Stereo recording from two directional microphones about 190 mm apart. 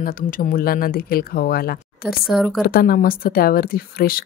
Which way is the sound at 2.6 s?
50° left (ahead or behind).